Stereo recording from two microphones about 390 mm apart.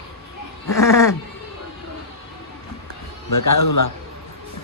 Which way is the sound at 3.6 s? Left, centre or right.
Left.